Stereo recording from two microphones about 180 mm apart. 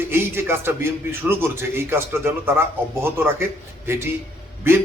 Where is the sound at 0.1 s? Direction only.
15° right (ahead or behind).